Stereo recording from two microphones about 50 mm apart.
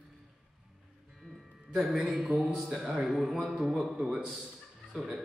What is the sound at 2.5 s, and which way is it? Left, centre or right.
A man's voice, centre.